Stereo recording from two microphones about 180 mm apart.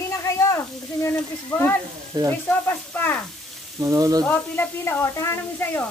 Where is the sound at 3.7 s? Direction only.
20° right (ahead or behind).